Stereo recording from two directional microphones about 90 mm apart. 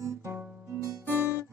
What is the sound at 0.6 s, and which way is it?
Music, 25° right (ahead or behind).